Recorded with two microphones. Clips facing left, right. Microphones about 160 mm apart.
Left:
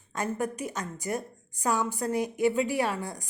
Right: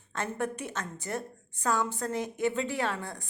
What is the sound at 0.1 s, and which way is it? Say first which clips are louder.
A woman's voice: left 2 dB; 10° left (ahead or behind).